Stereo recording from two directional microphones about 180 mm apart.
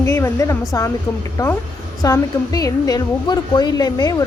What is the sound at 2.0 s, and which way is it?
A woman's voice, 20° left (ahead or behind).